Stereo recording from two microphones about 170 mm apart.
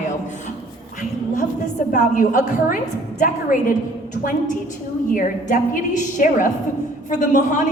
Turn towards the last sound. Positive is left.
turn(degrees=45)  # may be behind; listen again after turning